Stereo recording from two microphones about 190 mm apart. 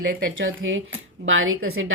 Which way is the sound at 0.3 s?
90° right.